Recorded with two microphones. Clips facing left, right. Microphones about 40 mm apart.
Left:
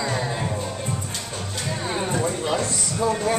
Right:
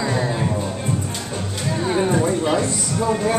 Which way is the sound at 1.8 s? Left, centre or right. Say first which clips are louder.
Right 6 dB; centre.